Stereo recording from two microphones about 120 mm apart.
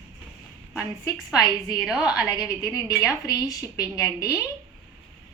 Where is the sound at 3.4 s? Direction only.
30° left (ahead or behind).